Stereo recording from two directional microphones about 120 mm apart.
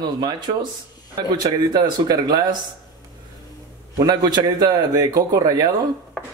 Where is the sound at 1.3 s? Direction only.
35° right (ahead or behind).